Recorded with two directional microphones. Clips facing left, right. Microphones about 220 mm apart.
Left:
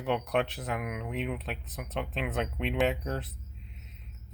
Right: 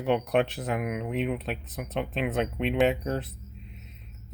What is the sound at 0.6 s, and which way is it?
Speech, 15° right (ahead or behind).